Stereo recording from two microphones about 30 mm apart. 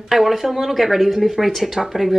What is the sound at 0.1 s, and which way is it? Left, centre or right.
A woman's voice, centre.